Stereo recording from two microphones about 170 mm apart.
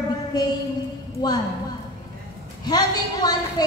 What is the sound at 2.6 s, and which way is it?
A woman's voice, 25° left (ahead or behind).